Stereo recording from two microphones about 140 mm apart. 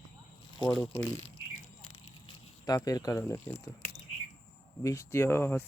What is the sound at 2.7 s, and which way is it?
Speech, 25° left (ahead or behind).